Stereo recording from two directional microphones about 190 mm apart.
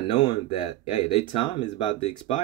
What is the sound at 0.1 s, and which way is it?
Speech, 25° left (ahead or behind).